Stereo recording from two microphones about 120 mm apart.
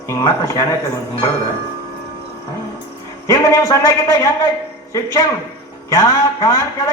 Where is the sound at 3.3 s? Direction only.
25° left (ahead or behind).